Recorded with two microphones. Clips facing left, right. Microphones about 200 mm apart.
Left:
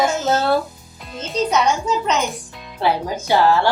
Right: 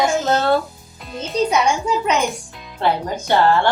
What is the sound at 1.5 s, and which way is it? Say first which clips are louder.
Speech: even; 10° right (ahead or behind).